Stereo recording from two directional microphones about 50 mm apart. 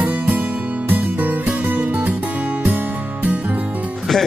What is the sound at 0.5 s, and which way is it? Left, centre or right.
Music, right.